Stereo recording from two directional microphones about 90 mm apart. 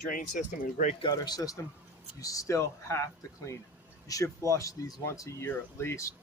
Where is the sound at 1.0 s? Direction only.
50° left (ahead or behind).